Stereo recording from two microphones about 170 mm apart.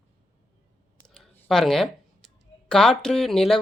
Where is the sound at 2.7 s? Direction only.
5° left (ahead or behind).